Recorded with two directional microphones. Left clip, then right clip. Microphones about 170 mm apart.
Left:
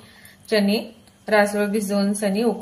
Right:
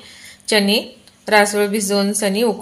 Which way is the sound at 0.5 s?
45° right (ahead or behind).